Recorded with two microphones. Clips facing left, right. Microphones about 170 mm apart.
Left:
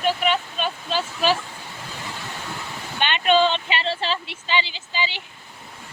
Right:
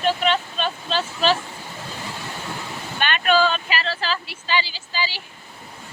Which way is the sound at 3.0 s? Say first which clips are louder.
Left 1 dB; 20° left (ahead or behind).